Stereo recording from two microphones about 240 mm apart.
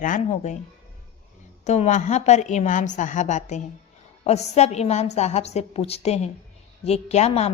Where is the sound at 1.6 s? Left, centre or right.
Left.